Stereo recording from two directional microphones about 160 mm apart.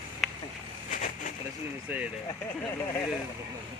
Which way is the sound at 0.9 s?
55° left (ahead or behind).